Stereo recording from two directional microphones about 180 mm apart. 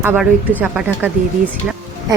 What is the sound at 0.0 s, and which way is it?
Speech, 10° right (ahead or behind).